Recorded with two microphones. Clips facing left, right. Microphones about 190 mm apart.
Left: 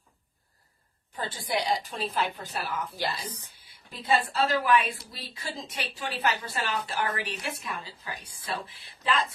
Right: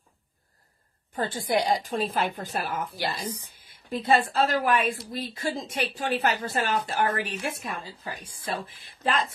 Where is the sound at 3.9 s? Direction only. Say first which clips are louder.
Right 4 dB; 50° right (ahead or behind).